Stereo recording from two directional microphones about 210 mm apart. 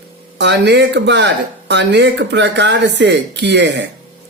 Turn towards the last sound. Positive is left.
turn(degrees=-55)  # may be behind; listen again after turning